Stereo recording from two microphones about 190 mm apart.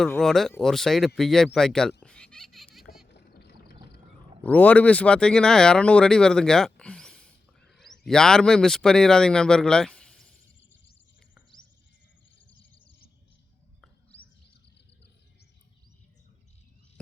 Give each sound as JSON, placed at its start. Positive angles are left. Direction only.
{"t": 0.0, "sound": "speech", "side_deg": 5}
{"t": 2.0, "sound": "a sound", "side_deg": 5}
{"t": 3.1, "sound": "boat", "side_deg": 60}
{"t": 4.4, "sound": "speech", "side_deg": 10}